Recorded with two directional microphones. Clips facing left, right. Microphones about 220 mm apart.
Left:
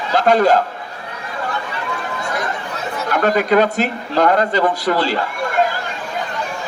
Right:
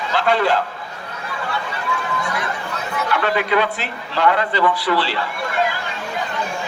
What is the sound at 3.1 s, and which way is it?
Speech, 45° left (ahead or behind).